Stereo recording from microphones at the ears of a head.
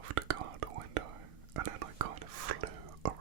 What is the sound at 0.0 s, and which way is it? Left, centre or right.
Whispering, right.